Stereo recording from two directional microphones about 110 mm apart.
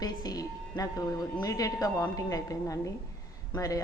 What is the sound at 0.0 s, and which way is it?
A woman's voice, 35° left (ahead or behind).